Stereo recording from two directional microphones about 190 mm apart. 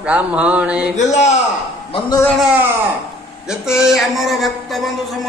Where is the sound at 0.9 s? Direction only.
35° left (ahead or behind).